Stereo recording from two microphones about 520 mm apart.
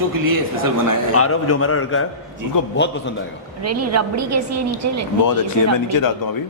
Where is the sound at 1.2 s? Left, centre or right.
Left.